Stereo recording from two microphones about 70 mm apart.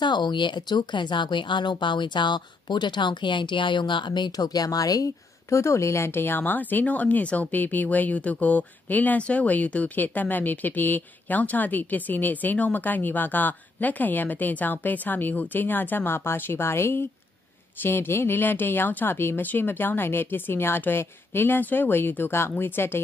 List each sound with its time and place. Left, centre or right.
0.0 s speech: left